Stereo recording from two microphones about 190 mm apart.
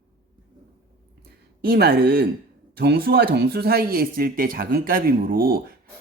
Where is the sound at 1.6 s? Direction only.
55° right (ahead or behind).